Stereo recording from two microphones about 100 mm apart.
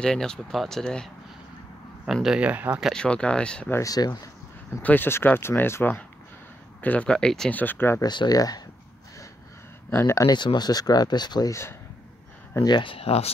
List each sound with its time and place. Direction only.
0.0 s speech: 5° left (ahead or behind)
2.2 s speech: 10° right (ahead or behind)
2.8 s speech: 5° left (ahead or behind)
3.7 s speech: 35° left (ahead or behind)
4.8 s speech: 20° left (ahead or behind)
7.6 s speech: 20° left (ahead or behind)
8.0 s speech: 45° left (ahead or behind)
9.8 s speech: 25° left (ahead or behind)
10.3 s speech: 45° left (ahead or behind)
12.6 s speech: 55° left (ahead or behind); by 13.3 s 85° left